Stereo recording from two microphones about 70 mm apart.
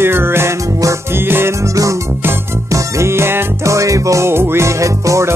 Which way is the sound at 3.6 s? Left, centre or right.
Right.